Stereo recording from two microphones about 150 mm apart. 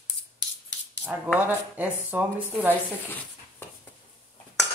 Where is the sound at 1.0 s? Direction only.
10° right (ahead or behind).